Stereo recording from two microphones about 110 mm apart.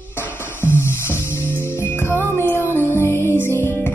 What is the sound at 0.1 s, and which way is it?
Music, 20° left (ahead or behind).